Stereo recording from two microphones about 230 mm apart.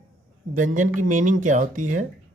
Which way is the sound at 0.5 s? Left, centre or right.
Right.